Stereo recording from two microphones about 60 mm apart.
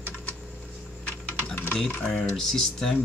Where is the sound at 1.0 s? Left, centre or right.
Left.